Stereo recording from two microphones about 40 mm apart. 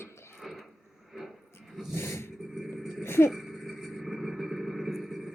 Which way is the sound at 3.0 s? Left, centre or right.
Left.